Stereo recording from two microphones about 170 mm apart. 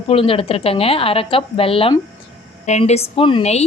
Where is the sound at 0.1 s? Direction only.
35° left (ahead or behind).